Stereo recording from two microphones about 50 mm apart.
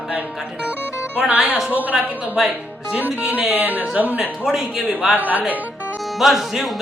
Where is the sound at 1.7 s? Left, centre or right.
Right.